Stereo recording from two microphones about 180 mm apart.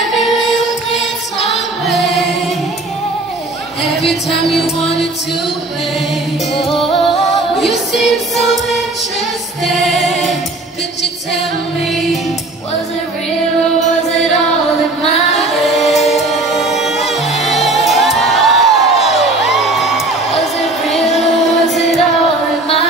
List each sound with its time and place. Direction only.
0.0 s music: centre (ahead or behind)
1.4 s choir: centre (ahead or behind)
4.5 s music: centre (ahead or behind)
6.6 s music: centre (ahead or behind)
9.8 s music: centre (ahead or behind)
15.3 s singing: centre (ahead or behind)
16.1 s music: centre (ahead or behind)
20.3 s a sound: centre (ahead or behind)
21.5 s music: centre (ahead or behind)